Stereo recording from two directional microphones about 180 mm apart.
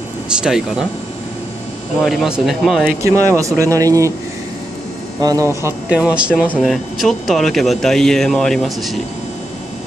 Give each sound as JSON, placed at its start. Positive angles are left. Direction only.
{"t": 0.4, "sound": "speech", "side_deg": -5}
{"t": 2.0, "sound": "speech", "side_deg": -5}
{"t": 3.0, "sound": "speech", "side_deg": -15}
{"t": 5.2, "sound": "speech", "side_deg": -20}